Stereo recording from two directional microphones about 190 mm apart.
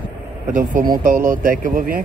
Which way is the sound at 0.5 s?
45° right (ahead or behind).